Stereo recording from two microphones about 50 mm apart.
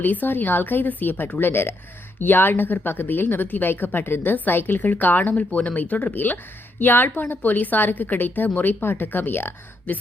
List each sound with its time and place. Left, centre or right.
0.0 s a woman's voice: left